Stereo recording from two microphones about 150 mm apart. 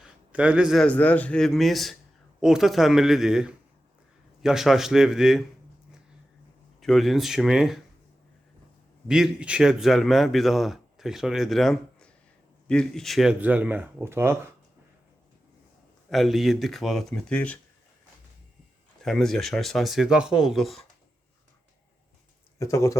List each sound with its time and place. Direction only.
0.0 s a sound: 5° right (ahead or behind)
0.9 s speech: 10° left (ahead or behind)
6.7 s speech: centre (ahead or behind)
9.0 s speech: 5° right (ahead or behind)
16.0 s speech: centre (ahead or behind)
19.0 s speech: 5° left (ahead or behind)
22.5 s speech: 20° left (ahead or behind)